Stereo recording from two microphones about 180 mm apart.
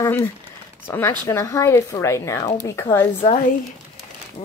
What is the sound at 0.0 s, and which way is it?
Speech, 15° left (ahead or behind).